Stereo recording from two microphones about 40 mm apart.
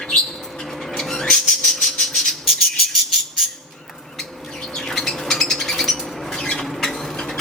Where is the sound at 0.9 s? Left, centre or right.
Centre.